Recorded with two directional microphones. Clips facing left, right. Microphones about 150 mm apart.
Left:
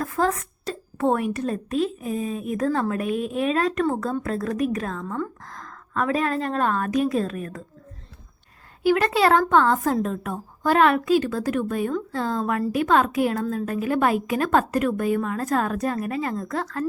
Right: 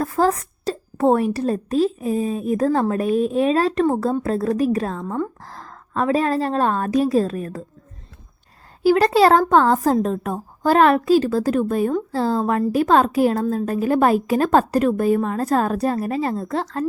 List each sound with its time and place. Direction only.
0.0 s a woman's voice: 35° right (ahead or behind)
8.8 s a woman's voice: 35° right (ahead or behind)